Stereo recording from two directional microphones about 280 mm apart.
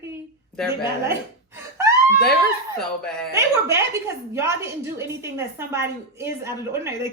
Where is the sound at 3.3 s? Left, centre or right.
Centre.